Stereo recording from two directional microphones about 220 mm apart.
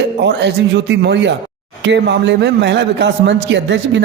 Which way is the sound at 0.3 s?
50° right (ahead or behind).